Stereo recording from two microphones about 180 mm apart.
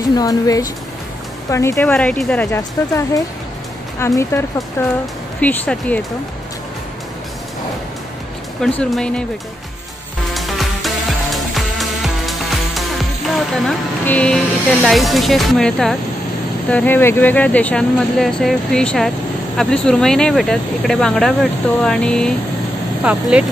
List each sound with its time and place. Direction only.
0.1 s speech: 20° left (ahead or behind)
8.5 s speech: 5° left (ahead or behind)
10.3 s music: centre (ahead or behind)
13.7 s speech: 5° left (ahead or behind)
23.1 s speech: 5° right (ahead or behind)